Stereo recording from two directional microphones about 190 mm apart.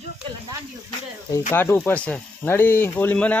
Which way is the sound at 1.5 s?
10° left (ahead or behind).